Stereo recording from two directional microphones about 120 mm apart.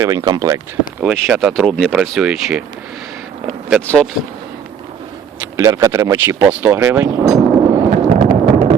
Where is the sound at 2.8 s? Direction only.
Centre (ahead or behind).